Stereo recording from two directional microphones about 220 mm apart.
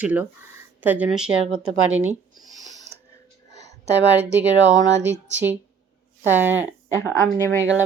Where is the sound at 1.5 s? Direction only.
70° right (ahead or behind).